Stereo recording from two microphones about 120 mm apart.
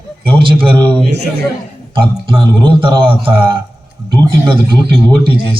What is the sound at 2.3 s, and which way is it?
A man's voice, 45° right (ahead or behind).